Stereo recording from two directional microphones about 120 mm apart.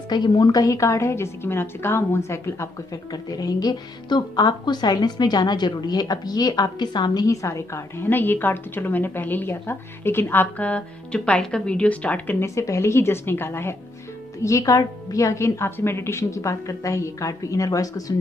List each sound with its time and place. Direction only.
0.1 s a woman's voice: 35° left (ahead or behind)